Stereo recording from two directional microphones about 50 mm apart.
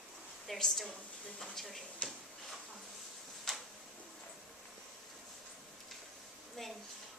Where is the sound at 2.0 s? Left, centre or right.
Left.